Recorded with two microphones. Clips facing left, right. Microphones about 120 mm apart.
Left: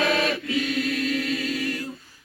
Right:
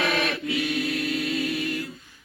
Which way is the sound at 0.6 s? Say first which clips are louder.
Left 2 dB; 15° right (ahead or behind).